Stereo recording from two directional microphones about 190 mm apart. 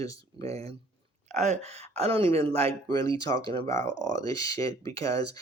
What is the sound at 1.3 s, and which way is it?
Speech, 35° right (ahead or behind).